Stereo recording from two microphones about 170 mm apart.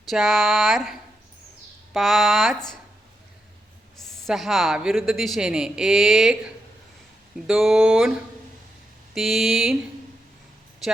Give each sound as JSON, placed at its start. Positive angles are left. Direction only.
{"t": 0.1, "sound": "speech", "side_deg": 0}
{"t": 3.9, "sound": "speech", "side_deg": 0}
{"t": 10.8, "sound": "speech", "side_deg": 0}